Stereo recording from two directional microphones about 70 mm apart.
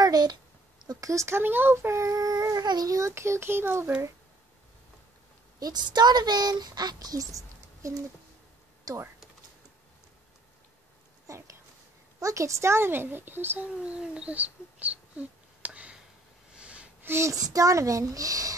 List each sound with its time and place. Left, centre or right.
0.0 s a sound: right
1.0 s a child's voice: right
2.9 s speech: right
5.6 s speech: right
11.2 s a sound: right
12.2 s speech: right
13.8 s a sound: centre
17.0 s speech: right
17.3 s a child's voice: right